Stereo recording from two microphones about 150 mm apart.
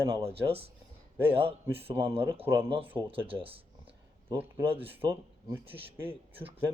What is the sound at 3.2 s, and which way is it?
Speech, 35° right (ahead or behind).